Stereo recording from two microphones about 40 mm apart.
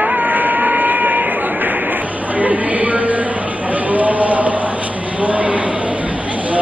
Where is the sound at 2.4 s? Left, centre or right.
Right.